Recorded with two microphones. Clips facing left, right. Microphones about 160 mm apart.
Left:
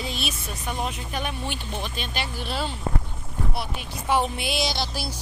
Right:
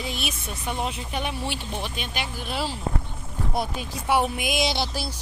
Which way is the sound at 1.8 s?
10° right (ahead or behind).